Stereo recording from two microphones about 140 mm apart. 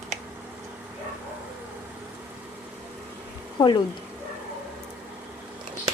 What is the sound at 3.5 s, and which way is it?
Speech, 35° left (ahead or behind).